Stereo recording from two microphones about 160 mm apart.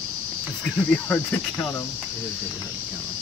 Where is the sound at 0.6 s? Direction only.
5° left (ahead or behind).